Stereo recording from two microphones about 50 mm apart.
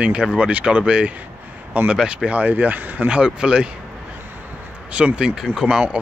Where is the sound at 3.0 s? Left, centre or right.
Centre.